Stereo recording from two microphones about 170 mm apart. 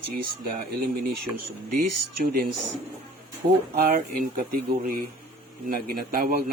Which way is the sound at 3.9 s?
55° right (ahead or behind).